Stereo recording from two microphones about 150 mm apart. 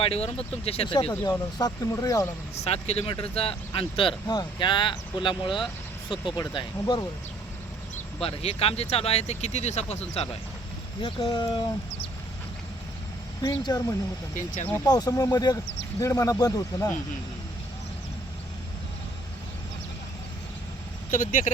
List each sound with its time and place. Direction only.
0.0 s speech: 40° left (ahead or behind)
1.1 s speech: 25° left (ahead or behind)
2.6 s speech: 45° left (ahead or behind); by 7.1 s 30° left (ahead or behind)
7.9 s speech: 45° left (ahead or behind)
11.0 s speech: 35° left (ahead or behind)
13.4 s speech: 25° left (ahead or behind)
14.3 s speech: 55° left (ahead or behind)
14.8 s speech: 25° left (ahead or behind)
21.1 s speech: 60° left (ahead or behind)